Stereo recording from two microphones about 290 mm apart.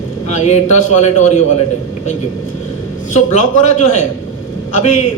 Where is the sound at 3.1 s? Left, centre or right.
Left.